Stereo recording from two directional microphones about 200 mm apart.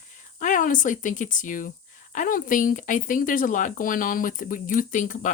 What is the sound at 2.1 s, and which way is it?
Speech, 40° left (ahead or behind).